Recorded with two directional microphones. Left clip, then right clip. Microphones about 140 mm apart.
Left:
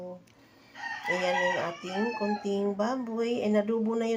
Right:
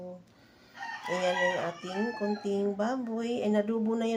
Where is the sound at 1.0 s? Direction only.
20° left (ahead or behind).